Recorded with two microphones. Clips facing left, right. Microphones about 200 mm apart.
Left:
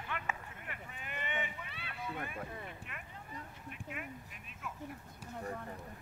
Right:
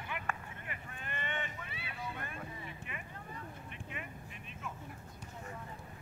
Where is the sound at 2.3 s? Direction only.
50° left (ahead or behind).